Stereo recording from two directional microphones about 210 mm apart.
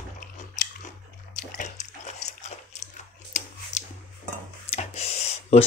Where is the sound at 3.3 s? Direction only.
35° left (ahead or behind).